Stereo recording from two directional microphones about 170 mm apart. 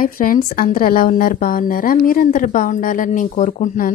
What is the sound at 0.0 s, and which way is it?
A woman's voice, 55° left (ahead or behind).